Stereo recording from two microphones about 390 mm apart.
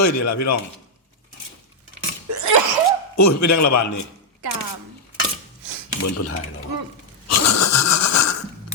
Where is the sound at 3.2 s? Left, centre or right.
Left.